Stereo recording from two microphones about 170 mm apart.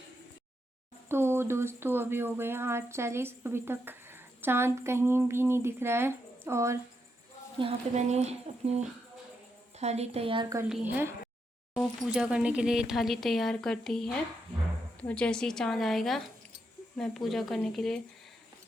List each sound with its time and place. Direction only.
1.0 s speech: 15° right (ahead or behind)
7.6 s speech: 40° right (ahead or behind)
9.8 s speech: 40° right (ahead or behind)
10.7 s speech: 10° right (ahead or behind)